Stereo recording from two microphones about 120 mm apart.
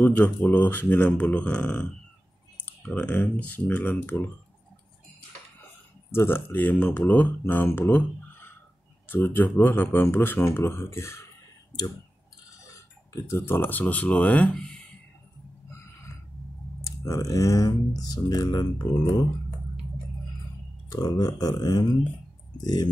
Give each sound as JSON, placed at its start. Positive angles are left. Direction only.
{"t": 0.0, "sound": "speech", "side_deg": 15}
{"t": 6.1, "sound": "speech", "side_deg": 20}
{"t": 12.7, "sound": "speech", "side_deg": 25}
{"t": 16.8, "sound": "speech", "side_deg": 25}
{"t": 20.9, "sound": "speech", "side_deg": 30}